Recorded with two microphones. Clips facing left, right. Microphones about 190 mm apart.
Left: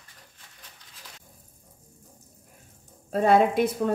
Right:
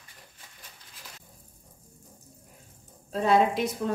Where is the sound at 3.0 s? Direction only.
50° left (ahead or behind).